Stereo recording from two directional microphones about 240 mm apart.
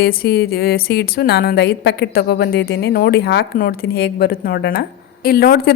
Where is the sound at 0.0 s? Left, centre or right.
Left.